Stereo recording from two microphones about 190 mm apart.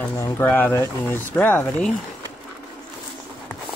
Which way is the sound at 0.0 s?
10° left (ahead or behind).